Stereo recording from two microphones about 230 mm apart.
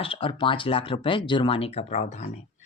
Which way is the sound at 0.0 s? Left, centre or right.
Left.